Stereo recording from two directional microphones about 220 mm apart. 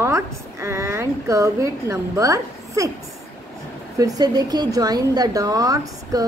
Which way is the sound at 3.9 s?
15° right (ahead or behind).